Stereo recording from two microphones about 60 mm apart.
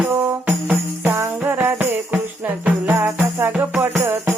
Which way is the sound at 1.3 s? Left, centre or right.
Right.